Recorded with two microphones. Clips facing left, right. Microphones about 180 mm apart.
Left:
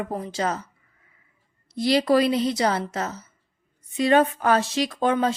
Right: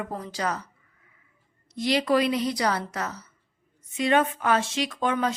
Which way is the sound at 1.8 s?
35° left (ahead or behind).